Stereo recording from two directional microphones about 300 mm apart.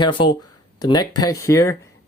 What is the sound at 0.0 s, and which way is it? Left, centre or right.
Speech, centre.